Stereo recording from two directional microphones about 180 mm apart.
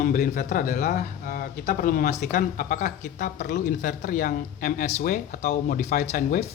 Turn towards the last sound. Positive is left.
turn(degrees=40)  # may be behind; listen again after turning